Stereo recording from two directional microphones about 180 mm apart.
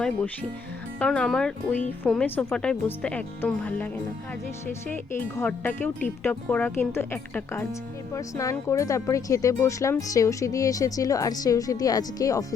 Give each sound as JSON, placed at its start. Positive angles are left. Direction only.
{"t": 0.9, "sound": "speech", "side_deg": 5}
{"t": 4.9, "sound": "speech", "side_deg": 10}